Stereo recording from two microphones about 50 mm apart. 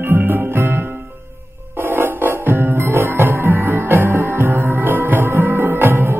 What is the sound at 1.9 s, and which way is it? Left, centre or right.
Music, right.